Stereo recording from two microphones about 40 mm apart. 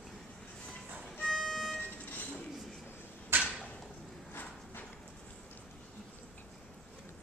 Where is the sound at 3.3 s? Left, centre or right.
Right.